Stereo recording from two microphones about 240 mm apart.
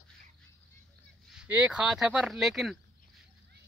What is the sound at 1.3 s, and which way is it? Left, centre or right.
Speech, centre.